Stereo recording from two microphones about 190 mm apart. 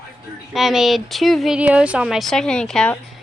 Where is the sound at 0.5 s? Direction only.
Centre (ahead or behind).